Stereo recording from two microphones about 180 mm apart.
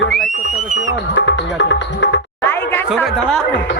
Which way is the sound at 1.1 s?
80° left.